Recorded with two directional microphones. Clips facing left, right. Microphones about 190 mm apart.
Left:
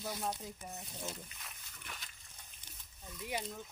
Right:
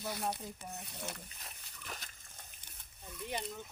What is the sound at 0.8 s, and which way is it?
Speech, 65° right (ahead or behind).